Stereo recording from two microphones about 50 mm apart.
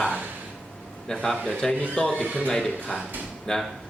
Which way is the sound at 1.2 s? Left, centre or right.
Centre.